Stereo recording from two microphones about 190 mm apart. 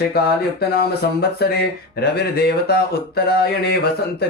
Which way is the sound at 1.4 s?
55° left (ahead or behind).